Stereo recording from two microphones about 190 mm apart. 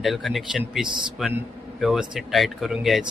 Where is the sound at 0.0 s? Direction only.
Centre (ahead or behind).